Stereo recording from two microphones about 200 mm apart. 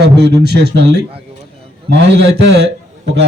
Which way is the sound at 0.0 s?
55° right (ahead or behind).